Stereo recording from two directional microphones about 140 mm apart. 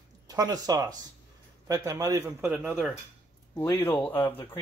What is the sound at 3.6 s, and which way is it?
Speech, 15° left (ahead or behind).